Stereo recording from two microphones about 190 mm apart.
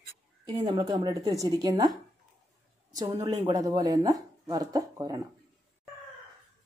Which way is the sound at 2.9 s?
20° right (ahead or behind).